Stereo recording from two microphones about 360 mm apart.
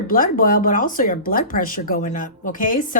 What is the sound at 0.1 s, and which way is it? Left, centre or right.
Speech, left.